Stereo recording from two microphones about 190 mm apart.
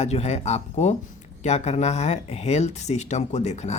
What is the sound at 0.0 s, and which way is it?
Speech, 35° left (ahead or behind).